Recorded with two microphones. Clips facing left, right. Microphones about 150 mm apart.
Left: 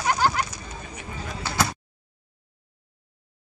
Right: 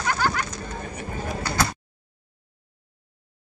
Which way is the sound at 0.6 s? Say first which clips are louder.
Right 5 dB; 50° right (ahead or behind).